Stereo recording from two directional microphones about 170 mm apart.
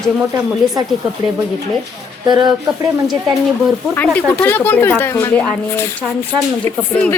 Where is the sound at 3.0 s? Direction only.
Centre (ahead or behind).